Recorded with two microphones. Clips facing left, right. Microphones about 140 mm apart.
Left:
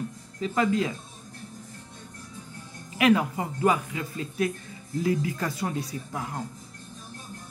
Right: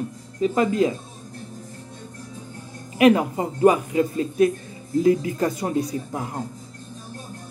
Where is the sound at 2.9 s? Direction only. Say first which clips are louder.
Right 5 dB; 30° right (ahead or behind).